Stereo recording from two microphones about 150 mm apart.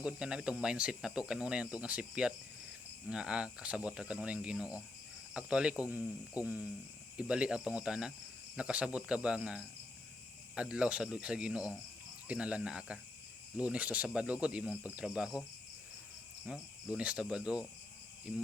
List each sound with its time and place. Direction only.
0.0 s speech: 5° right (ahead or behind)
16.5 s speech: 5° right (ahead or behind)